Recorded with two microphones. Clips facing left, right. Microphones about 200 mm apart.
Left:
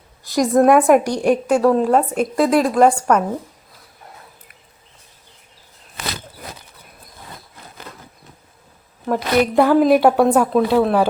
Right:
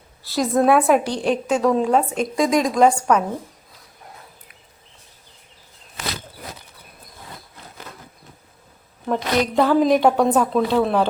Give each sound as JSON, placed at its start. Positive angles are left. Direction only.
{"t": 0.2, "sound": "a sound", "side_deg": 15}
{"t": 0.5, "sound": "a woman's voice", "side_deg": 10}
{"t": 9.0, "sound": "a woman's voice", "side_deg": 5}